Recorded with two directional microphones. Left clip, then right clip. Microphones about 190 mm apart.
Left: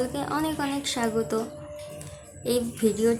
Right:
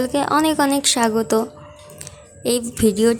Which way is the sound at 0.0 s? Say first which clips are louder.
Right 10 dB; 40° right (ahead or behind).